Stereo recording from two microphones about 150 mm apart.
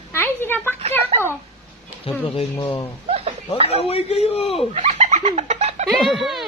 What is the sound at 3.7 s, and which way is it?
Speech, 40° left (ahead or behind).